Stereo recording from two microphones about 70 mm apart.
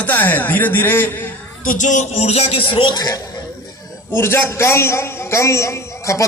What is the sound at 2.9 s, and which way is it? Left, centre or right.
Speech, left.